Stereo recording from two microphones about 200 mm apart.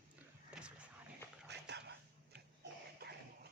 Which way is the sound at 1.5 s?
55° right (ahead or behind).